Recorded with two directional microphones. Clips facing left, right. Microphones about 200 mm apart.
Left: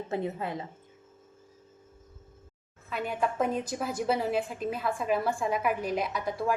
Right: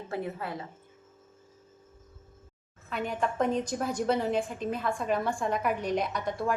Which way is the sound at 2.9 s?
5° left (ahead or behind).